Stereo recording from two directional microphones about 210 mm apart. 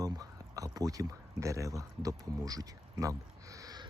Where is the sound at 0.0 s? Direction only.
15° right (ahead or behind).